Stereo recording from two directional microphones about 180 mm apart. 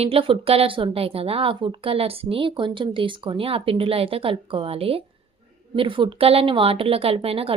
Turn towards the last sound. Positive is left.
turn(degrees=-30)  # may be behind; listen again after turning